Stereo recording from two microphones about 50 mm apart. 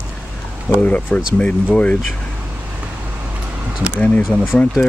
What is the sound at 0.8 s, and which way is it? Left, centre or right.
Speech, left.